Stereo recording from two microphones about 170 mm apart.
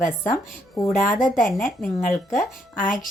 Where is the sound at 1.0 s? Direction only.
55° left (ahead or behind).